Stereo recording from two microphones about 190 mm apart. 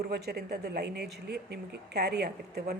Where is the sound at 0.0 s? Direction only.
55° right (ahead or behind).